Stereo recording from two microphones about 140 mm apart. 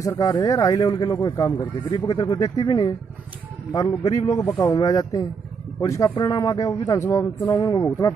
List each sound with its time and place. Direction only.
0.0 s speech: 25° left (ahead or behind)